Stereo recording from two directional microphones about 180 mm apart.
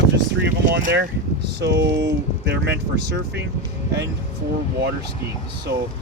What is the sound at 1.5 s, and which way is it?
Speech, 75° right (ahead or behind).